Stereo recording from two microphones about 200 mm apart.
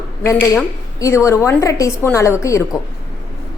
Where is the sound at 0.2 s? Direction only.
10° left (ahead or behind).